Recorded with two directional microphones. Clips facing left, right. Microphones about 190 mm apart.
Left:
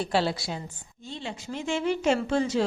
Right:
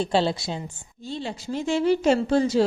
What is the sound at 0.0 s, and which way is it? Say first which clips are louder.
Speech: right 4 dB; 25° right (ahead or behind).